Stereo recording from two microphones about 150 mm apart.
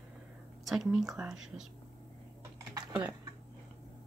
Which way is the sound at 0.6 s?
Centre (ahead or behind).